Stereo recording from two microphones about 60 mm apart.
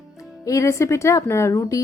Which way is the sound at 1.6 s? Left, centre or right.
Left.